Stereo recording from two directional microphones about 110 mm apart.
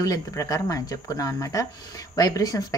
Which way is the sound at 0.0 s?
30° left (ahead or behind).